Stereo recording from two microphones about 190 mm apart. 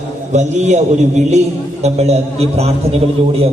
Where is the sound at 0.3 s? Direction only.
35° right (ahead or behind).